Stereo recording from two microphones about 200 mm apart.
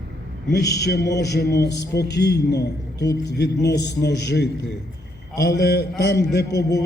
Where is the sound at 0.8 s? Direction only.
55° left (ahead or behind).